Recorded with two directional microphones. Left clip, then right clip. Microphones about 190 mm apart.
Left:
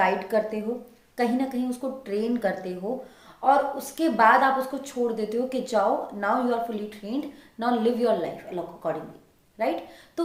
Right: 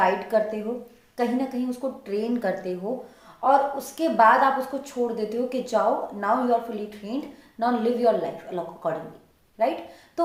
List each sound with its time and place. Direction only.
0.0 s a woman's voice: 20° left (ahead or behind)